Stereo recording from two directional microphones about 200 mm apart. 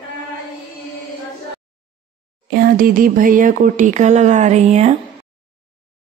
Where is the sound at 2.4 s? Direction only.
50° right (ahead or behind); by 4.9 s 35° right (ahead or behind).